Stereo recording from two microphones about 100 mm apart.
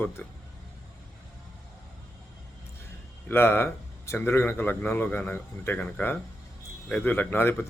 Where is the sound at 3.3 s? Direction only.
25° left (ahead or behind).